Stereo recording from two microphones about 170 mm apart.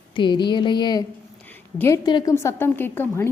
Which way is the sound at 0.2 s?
25° left (ahead or behind).